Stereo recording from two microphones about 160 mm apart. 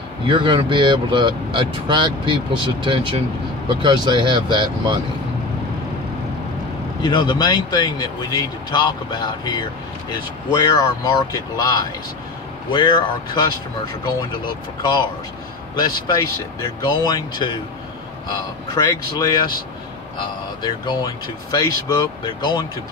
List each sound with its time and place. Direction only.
0.3 s speech: 35° right (ahead or behind)
7.0 s speech: 30° left (ahead or behind)
18.8 s speech: 25° left (ahead or behind)
20.6 s speech: 25° left (ahead or behind)